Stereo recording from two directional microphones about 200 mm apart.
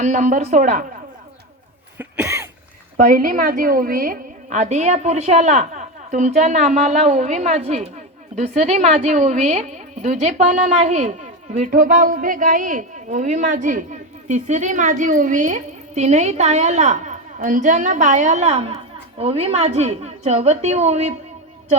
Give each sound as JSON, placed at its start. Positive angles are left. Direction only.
{"t": 0.0, "sound": "a woman's voice", "side_deg": -35}
{"t": 2.0, "sound": "a sound", "side_deg": -10}
{"t": 3.0, "sound": "a woman's voice", "side_deg": -45}